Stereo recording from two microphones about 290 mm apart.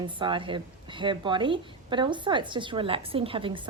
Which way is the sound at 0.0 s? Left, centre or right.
Centre.